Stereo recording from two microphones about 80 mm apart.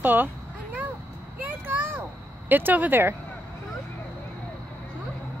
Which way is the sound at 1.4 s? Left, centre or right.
Right.